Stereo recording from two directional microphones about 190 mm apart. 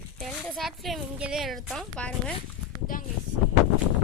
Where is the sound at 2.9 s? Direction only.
45° left (ahead or behind).